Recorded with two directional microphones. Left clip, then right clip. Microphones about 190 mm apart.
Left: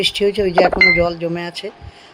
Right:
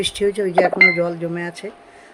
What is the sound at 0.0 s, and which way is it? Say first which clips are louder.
Speech: left 4 dB; 15° left (ahead or behind).